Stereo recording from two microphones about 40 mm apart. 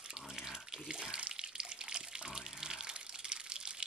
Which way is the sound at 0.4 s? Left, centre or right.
Centre.